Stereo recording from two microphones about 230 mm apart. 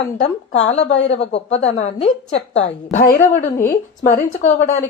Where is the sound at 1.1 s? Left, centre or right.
Left.